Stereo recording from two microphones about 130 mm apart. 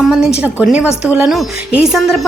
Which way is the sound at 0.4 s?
10° right (ahead or behind).